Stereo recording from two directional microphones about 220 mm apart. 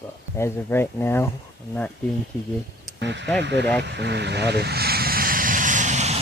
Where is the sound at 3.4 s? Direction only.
50° right (ahead or behind).